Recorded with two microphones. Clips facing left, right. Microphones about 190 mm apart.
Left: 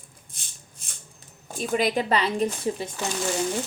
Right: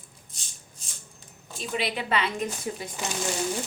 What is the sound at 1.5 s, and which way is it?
A woman's voice, 45° left (ahead or behind).